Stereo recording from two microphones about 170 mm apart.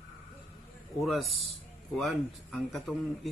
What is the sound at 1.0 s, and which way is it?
Speech, centre (ahead or behind).